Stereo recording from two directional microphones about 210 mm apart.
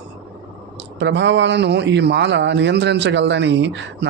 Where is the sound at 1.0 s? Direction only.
60° right (ahead or behind).